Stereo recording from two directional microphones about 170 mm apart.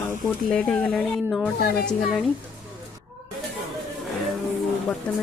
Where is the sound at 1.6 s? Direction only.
65° left (ahead or behind).